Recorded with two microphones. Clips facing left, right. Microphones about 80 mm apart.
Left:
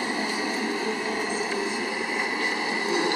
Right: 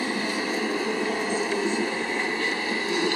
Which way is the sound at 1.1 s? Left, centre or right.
Centre.